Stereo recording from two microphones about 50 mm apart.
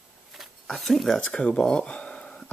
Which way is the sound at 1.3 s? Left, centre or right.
Left.